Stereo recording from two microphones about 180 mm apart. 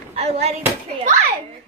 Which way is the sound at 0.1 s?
35° right (ahead or behind).